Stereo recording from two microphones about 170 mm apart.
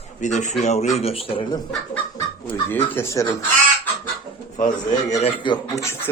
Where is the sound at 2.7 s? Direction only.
10° left (ahead or behind).